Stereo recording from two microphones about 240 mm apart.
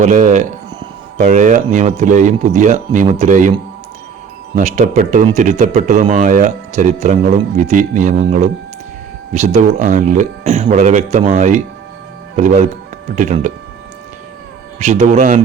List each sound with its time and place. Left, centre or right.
0.0 s speech: right
4.5 s speech: right
14.8 s a man's voice: right